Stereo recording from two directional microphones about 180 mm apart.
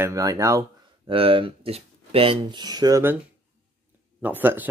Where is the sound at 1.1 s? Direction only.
30° right (ahead or behind).